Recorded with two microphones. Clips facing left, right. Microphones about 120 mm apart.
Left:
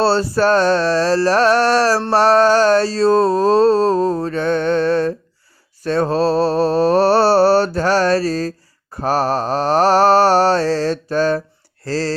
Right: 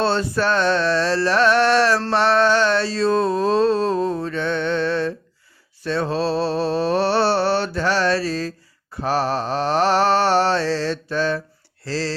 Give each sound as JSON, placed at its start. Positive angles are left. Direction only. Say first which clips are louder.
{"t": 0.0, "sound": "mantra", "louder": "left 5 dB", "side_deg": 35}
{"t": 11.9, "sound": "speech", "louder": "left 4 dB", "side_deg": 45}